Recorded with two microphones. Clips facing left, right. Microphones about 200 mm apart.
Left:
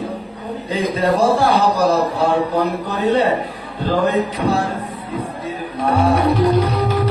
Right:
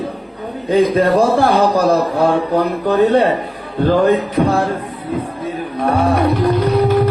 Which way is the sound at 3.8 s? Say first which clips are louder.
Right 4 dB; 55° right (ahead or behind).